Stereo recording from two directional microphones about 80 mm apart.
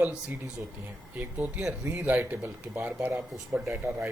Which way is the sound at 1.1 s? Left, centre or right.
Right.